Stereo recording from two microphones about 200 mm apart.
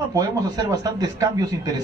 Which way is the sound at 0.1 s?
15° right (ahead or behind).